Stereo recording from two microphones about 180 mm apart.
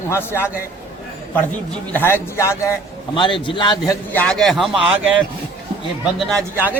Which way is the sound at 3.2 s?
25° left (ahead or behind).